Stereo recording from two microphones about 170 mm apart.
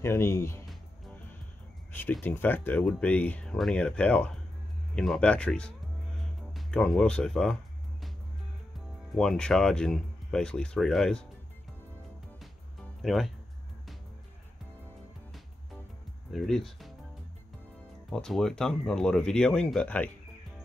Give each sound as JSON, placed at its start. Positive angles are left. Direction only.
{"t": 0.0, "sound": "speech", "side_deg": 15}
{"t": 1.9, "sound": "speech", "side_deg": 10}
{"t": 9.1, "sound": "speech", "side_deg": 5}
{"t": 13.0, "sound": "speech", "side_deg": 0}
{"t": 16.3, "sound": "speech", "side_deg": 0}
{"t": 18.1, "sound": "speech", "side_deg": 5}